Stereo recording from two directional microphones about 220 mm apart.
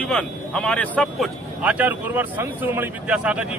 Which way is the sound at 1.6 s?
5° right (ahead or behind).